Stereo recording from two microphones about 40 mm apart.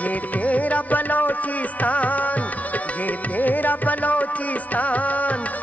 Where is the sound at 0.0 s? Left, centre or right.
Left.